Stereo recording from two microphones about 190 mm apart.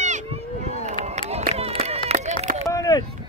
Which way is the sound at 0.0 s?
40° right (ahead or behind).